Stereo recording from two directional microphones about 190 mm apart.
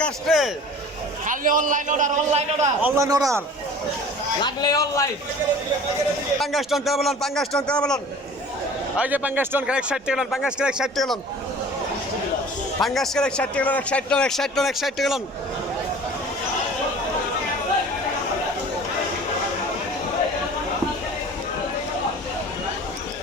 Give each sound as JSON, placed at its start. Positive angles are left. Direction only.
{"t": 0.0, "sound": "speech", "side_deg": 0}
{"t": 1.3, "sound": "a man's voice", "side_deg": -45}
{"t": 2.8, "sound": "a man's voice", "side_deg": -15}
{"t": 4.4, "sound": "a man's voice", "side_deg": 20}
{"t": 6.4, "sound": "speech", "side_deg": 0}
{"t": 9.0, "sound": "speech", "side_deg": -10}
{"t": 12.8, "sound": "speech", "side_deg": 0}